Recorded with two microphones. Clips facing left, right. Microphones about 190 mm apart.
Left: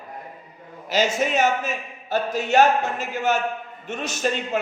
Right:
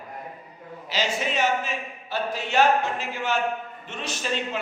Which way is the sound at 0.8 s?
45° left (ahead or behind).